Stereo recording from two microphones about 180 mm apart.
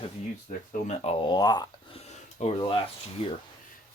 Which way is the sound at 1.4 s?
20° left (ahead or behind).